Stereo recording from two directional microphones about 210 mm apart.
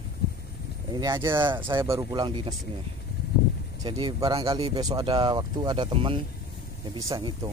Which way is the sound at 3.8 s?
20° right (ahead or behind).